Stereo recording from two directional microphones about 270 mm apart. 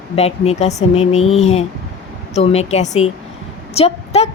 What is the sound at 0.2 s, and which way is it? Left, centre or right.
A woman's voice, left.